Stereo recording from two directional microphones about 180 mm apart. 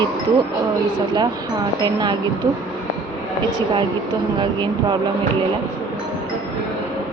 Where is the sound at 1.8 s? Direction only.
25° right (ahead or behind).